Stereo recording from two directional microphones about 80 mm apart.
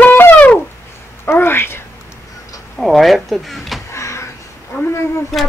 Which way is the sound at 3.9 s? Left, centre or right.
Left.